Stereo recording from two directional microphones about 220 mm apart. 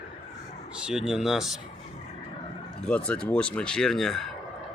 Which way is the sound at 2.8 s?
5° left (ahead or behind).